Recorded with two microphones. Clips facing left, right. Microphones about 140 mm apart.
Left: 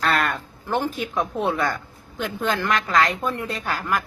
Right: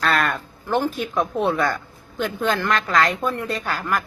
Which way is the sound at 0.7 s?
15° left (ahead or behind).